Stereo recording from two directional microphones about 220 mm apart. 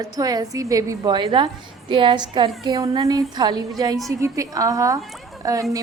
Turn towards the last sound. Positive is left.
turn(degrees=-15)  # may be behind; listen again after turning